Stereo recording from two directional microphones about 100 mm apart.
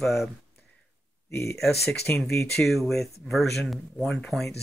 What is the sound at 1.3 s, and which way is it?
Speech, 30° left (ahead or behind).